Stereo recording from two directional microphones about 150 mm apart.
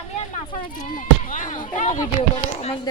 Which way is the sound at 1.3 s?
60° left (ahead or behind).